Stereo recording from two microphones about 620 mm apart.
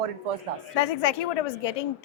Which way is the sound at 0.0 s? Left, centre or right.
Right.